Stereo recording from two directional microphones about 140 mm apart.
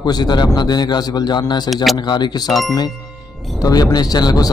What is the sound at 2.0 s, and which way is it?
Speech, 30° left (ahead or behind).